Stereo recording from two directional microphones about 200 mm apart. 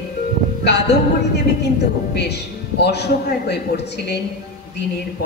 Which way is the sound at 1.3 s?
55° left (ahead or behind).